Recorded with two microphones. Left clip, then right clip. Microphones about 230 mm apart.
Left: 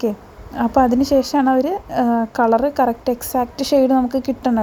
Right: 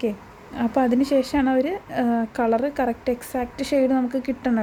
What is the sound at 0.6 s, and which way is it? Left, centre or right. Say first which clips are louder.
A woman's voice: left 6 dB; centre.